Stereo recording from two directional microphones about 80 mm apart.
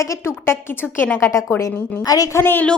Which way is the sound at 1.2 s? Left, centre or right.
Left.